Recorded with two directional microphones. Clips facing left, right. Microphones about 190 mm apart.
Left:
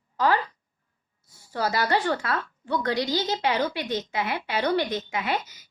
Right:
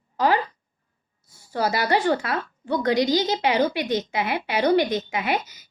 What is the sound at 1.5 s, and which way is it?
A woman's voice, 15° right (ahead or behind).